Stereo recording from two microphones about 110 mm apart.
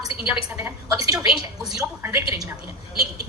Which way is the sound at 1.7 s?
30° right (ahead or behind).